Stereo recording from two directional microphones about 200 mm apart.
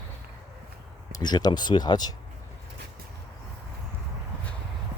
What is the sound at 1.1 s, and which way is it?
Speech, 20° left (ahead or behind).